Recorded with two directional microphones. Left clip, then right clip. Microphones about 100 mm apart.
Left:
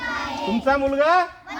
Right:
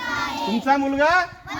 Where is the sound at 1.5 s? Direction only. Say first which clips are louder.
Right 2 dB; 50° right (ahead or behind).